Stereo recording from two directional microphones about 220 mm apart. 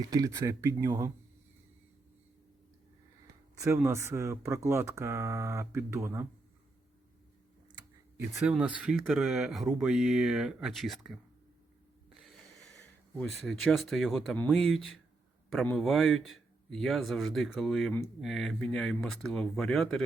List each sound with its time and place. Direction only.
0.0 s speech: 15° right (ahead or behind)
3.6 s speech: 10° right (ahead or behind)
8.4 s speech: 5° right (ahead or behind)
13.1 s speech: centre (ahead or behind)